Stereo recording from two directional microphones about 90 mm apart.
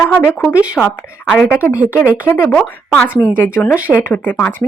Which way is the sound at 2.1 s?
20° left (ahead or behind).